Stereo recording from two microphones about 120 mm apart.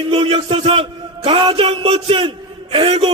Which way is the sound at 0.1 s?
45° right (ahead or behind).